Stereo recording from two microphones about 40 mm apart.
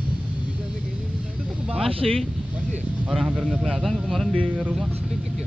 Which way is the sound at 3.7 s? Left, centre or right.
Centre.